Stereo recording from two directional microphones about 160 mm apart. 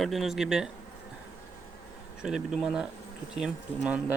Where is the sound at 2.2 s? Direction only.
5° right (ahead or behind).